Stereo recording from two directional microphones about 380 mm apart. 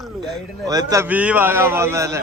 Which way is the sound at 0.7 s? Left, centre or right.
Centre.